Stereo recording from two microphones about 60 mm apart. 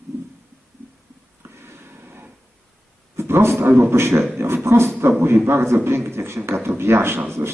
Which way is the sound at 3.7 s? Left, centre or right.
Right.